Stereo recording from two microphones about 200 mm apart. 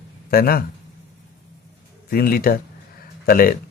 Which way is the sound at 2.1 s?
45° left (ahead or behind).